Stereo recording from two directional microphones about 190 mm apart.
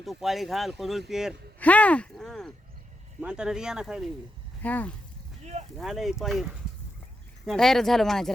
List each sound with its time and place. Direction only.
0.0 s speech: centre (ahead or behind)
1.5 s a sound: 10° left (ahead or behind)
3.2 s speech: 5° right (ahead or behind)
4.6 s speech: 10° left (ahead or behind)
5.4 s a sound: 35° right (ahead or behind)
5.7 s speech: centre (ahead or behind)